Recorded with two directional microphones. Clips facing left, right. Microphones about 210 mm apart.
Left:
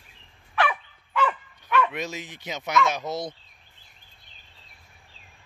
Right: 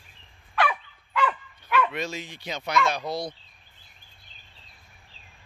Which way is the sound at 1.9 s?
20° left (ahead or behind).